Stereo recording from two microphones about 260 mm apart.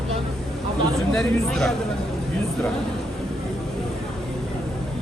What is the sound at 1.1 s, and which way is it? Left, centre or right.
Speech, centre.